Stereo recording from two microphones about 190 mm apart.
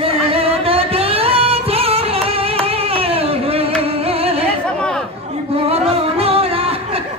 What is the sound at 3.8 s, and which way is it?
Music, 30° right (ahead or behind).